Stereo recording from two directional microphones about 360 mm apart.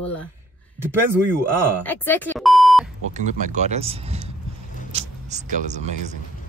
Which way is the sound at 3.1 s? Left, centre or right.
Centre.